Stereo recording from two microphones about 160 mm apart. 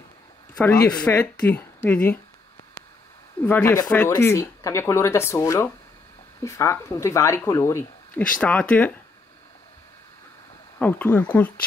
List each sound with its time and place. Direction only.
0.8 s speech: 5° left (ahead or behind)
3.4 s speech: 10° left (ahead or behind)
8.3 s speech: 10° left (ahead or behind)
10.8 s speech: 10° left (ahead or behind)